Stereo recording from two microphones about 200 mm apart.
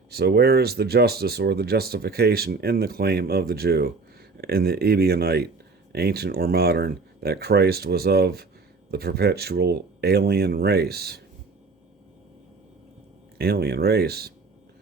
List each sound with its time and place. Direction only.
0.1 s speech: 50° right (ahead or behind)
13.4 s speech: 50° right (ahead or behind)